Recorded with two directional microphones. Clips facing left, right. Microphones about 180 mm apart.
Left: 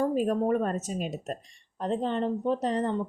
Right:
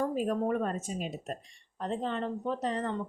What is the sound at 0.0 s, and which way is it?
Speech, 40° left (ahead or behind).